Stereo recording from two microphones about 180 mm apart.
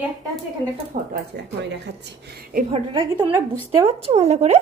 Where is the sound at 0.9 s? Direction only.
40° right (ahead or behind).